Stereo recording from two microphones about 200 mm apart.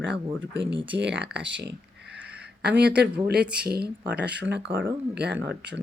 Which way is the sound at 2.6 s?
55° right (ahead or behind).